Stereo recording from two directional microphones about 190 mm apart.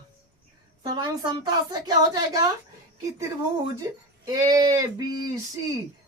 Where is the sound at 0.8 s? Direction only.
20° right (ahead or behind).